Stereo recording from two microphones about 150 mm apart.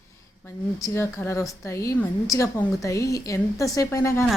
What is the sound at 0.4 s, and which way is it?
A woman's voice, 20° left (ahead or behind).